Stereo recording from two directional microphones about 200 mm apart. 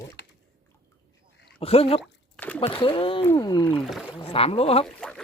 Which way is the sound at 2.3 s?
5° left (ahead or behind).